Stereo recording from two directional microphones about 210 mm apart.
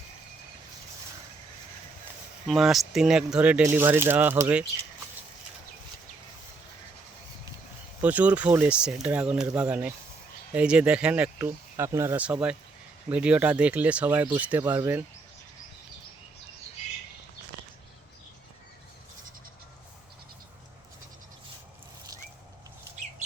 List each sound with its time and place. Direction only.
2.5 s speech: centre (ahead or behind)
8.0 s speech: 5° right (ahead or behind)